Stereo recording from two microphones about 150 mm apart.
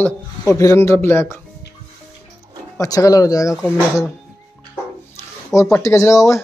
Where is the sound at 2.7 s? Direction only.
20° left (ahead or behind).